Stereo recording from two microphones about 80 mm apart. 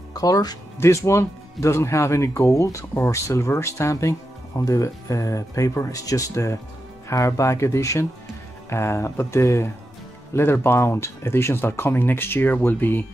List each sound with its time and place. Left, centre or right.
0.1 s speech: left
0.7 s speech: left